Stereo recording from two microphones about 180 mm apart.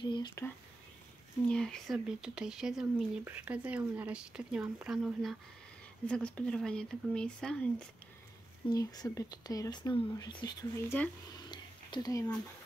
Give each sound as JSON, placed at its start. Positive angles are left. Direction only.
{"t": 0.0, "sound": "speech", "side_deg": 25}
{"t": 1.5, "sound": "speech", "side_deg": 5}
{"t": 8.6, "sound": "speech", "side_deg": 20}
{"t": 11.3, "sound": "a sound", "side_deg": 25}